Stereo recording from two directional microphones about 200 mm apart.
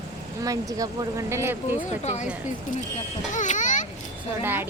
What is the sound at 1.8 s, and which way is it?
Speech, 35° left (ahead or behind).